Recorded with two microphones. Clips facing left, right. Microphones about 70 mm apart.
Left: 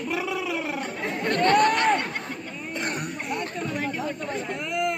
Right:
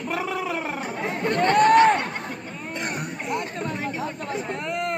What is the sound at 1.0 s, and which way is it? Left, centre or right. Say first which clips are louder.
Chatter: right 1 dB; right.